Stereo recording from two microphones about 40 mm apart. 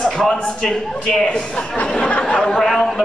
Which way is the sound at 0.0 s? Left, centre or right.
Centre.